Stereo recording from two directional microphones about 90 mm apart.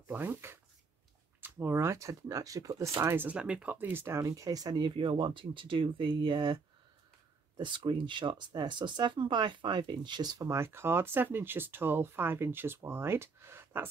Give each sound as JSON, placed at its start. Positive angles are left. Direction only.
{"t": 0.1, "sound": "speech", "side_deg": -25}
{"t": 3.0, "sound": "speech", "side_deg": -25}
{"t": 3.3, "sound": "speech", "side_deg": -10}
{"t": 4.2, "sound": "speech", "side_deg": -40}
{"t": 10.5, "sound": "speech", "side_deg": -30}